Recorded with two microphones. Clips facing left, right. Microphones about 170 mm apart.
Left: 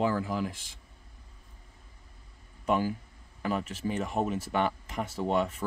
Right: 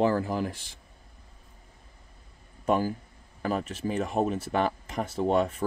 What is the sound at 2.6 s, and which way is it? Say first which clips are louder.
Speech: right 2 dB; 40° right (ahead or behind).